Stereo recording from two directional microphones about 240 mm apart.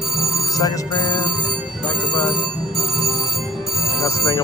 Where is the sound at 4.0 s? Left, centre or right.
Centre.